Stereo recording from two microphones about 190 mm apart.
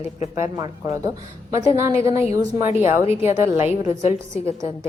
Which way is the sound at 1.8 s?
15° right (ahead or behind).